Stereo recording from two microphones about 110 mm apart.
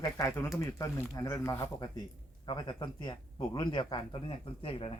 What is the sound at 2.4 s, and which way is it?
Speech, 45° left (ahead or behind).